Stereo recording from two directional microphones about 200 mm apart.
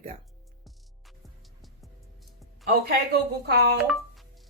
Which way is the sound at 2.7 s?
55° right (ahead or behind).